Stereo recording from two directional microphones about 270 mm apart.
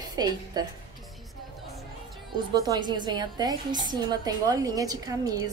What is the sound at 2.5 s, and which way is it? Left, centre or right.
A woman's voice, centre.